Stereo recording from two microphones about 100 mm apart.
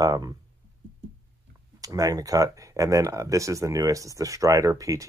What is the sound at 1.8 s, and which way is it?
Speech, 35° right (ahead or behind).